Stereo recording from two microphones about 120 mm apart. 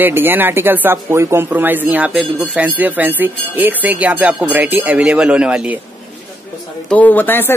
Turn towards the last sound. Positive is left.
turn(degrees=15)  # may be behind; listen again after turning